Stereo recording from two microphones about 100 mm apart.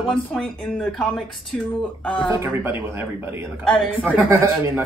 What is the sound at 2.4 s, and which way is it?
Speech, 20° right (ahead or behind).